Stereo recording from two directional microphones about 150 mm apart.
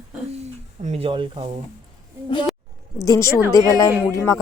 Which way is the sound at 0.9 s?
40° right (ahead or behind).